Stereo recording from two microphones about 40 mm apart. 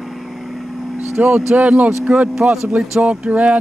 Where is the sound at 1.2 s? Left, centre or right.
Right.